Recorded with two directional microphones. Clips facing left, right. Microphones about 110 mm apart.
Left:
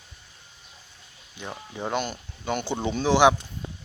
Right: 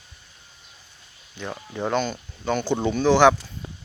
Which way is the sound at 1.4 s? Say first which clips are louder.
Right 4 dB; 10° left (ahead or behind).